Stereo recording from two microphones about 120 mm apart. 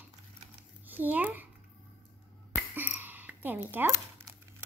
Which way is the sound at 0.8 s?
15° right (ahead or behind).